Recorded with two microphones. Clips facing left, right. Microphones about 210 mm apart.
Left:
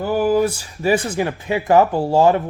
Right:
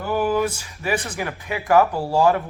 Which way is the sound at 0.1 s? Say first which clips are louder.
Left 4 dB; 30° left (ahead or behind).